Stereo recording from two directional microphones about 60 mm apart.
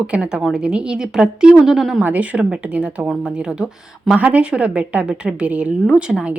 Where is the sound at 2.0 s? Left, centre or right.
Right.